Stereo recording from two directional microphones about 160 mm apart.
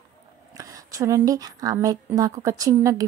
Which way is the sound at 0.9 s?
20° right (ahead or behind).